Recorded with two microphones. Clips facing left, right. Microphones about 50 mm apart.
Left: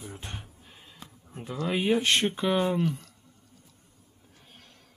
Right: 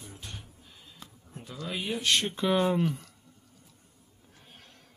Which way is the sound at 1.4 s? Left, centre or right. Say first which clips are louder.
Left 7 dB; left.